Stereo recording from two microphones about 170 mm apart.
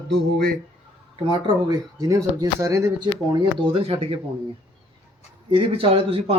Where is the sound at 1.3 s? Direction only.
20° right (ahead or behind).